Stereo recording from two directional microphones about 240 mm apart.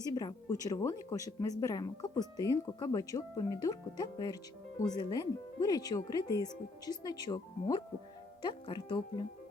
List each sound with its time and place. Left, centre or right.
0.0 s speech: centre